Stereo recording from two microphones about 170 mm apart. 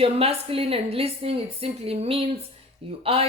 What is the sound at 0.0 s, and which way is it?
Speech, 35° right (ahead or behind).